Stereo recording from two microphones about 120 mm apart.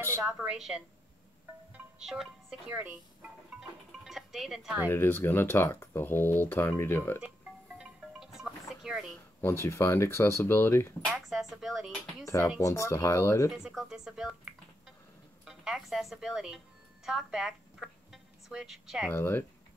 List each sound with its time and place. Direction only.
0.4 s a woman's voice: 5° right (ahead or behind)
1.7 s music: 5° right (ahead or behind)
2.7 s speech: 15° right (ahead or behind)
4.0 s music: centre (ahead or behind)
4.8 s speech: 20° left (ahead or behind)
7.2 s music: 5° right (ahead or behind)
9.4 s speech: 25° left (ahead or behind)
11.1 s speech: centre (ahead or behind)
12.3 s speech: 25° left (ahead or behind)
13.5 s a woman's voice: 5° right (ahead or behind)
19.0 s speech: 20° left (ahead or behind)